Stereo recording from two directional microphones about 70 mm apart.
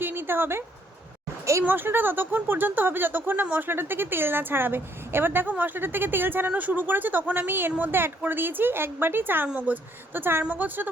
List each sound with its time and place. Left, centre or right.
0.0 s a sound: right
1.6 s a woman's voice: right
10.2 s a woman's voice: right